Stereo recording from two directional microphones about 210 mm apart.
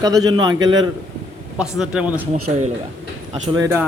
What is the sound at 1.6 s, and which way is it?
Speech, 5° right (ahead or behind).